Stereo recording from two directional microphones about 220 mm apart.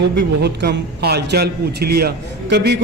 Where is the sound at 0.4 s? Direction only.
50° right (ahead or behind).